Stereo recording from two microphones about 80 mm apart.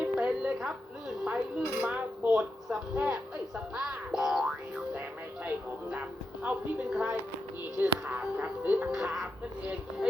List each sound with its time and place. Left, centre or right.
0.0 s music: centre
3.8 s music: centre
5.5 s music: centre
8.9 s music: centre